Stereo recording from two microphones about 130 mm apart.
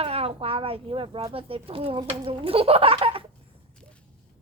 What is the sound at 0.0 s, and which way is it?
Speech, 50° right (ahead or behind).